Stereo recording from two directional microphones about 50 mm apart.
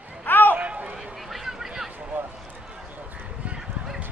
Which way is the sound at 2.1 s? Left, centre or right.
Right.